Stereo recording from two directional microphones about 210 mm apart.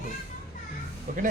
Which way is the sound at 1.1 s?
40° right (ahead or behind).